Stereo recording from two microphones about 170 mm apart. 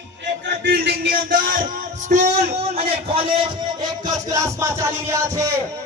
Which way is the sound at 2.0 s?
45° right (ahead or behind).